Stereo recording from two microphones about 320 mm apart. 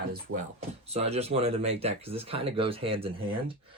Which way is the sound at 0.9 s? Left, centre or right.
Centre.